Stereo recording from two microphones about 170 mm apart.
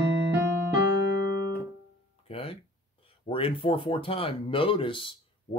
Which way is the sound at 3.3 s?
30° left (ahead or behind).